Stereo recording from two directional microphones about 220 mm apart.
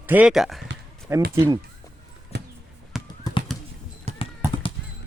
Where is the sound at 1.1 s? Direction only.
10° right (ahead or behind).